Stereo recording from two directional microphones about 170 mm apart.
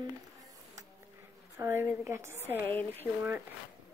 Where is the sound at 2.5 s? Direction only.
10° left (ahead or behind).